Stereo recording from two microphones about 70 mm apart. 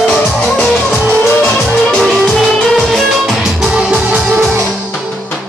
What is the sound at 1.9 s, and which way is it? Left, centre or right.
Music, centre.